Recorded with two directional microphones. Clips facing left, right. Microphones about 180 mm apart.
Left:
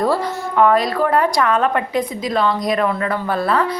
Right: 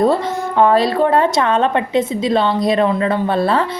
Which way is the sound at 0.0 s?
25° right (ahead or behind).